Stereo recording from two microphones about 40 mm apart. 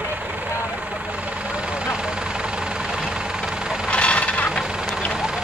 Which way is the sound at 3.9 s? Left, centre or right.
Left.